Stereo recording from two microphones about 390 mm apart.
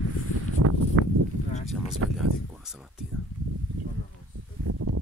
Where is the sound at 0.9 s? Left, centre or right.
Right.